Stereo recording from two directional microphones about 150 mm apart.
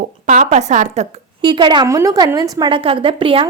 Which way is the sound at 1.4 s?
30° right (ahead or behind).